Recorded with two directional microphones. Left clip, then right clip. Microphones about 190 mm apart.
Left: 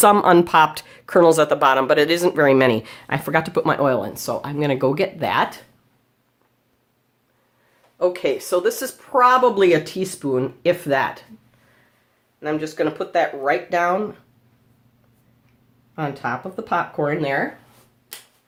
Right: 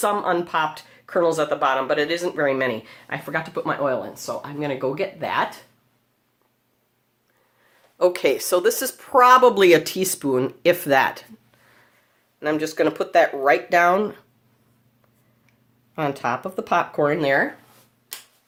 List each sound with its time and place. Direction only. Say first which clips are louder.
0.0 s speech: left 8 dB; 50° left (ahead or behind); by 5.5 s 30° left (ahead or behind)
7.9 s speech: right 1 dB; 40° right (ahead or behind)
12.4 s speech: right 1 dB; 50° right (ahead or behind)
16.0 s speech: right 1 dB; 50° right (ahead or behind)